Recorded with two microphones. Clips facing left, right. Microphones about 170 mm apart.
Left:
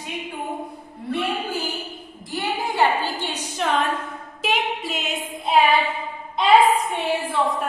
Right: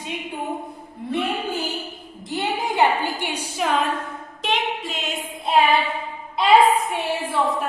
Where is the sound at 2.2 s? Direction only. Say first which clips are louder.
Right 1 dB; 20° right (ahead or behind); by 3.9 s 5° right (ahead or behind).